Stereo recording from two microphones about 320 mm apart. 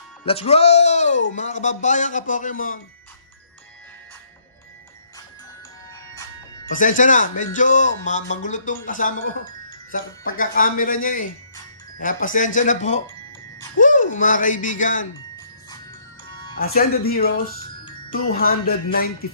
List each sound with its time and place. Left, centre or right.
0.3 s speech: centre
6.7 s speech: left
16.7 s speech: left